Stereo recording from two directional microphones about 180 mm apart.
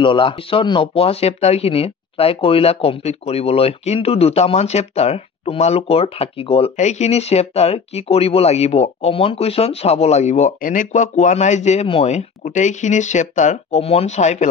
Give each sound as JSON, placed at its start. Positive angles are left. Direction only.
{"t": 0.0, "sound": "speech", "side_deg": 30}